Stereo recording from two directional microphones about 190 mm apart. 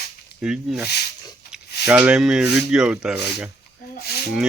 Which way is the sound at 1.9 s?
5° right (ahead or behind).